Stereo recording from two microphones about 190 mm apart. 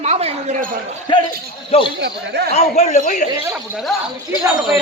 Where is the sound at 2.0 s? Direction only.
60° right (ahead or behind).